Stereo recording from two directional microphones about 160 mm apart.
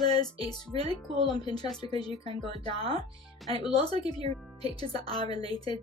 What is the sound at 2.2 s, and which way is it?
Speech, 40° right (ahead or behind).